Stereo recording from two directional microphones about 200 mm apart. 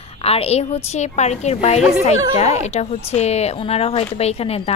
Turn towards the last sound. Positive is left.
turn(degrees=30)  # may be behind; listen again after turning